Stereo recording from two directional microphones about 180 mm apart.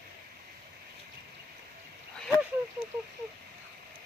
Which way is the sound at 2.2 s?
5° left (ahead or behind).